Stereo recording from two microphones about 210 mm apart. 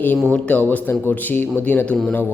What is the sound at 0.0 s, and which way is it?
Speech, 5° left (ahead or behind).